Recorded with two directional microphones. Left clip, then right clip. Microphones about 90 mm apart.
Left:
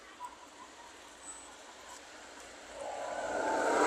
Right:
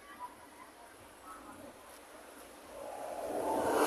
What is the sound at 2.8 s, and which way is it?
Vehicle, centre (ahead or behind).